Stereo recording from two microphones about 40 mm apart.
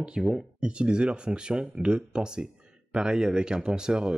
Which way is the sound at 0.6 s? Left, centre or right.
Right.